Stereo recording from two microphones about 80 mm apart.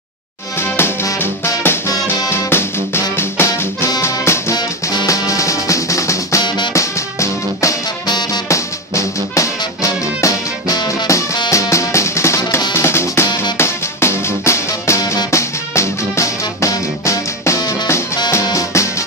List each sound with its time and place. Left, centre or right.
0.6 s music: left
2.2 s music: left
5.0 s music: left
12.7 s drum kit: left
13.6 s music: left